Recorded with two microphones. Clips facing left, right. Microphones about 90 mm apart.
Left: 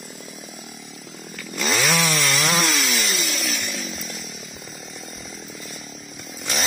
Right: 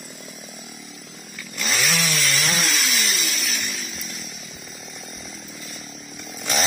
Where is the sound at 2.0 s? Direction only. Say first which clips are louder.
Left 3 dB; 60° left (ahead or behind).